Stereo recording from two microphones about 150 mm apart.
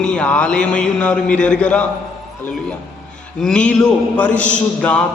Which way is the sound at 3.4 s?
5° left (ahead or behind).